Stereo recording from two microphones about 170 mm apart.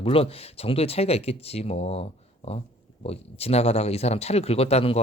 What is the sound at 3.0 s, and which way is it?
Speech, 35° left (ahead or behind).